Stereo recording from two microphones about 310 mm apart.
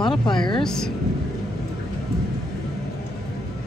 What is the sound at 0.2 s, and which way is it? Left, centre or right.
Speech, centre.